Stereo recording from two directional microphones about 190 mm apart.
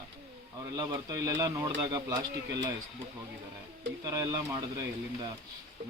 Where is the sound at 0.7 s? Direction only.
20° right (ahead or behind).